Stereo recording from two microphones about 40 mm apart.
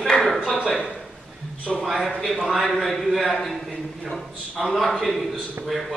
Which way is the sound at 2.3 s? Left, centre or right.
Centre.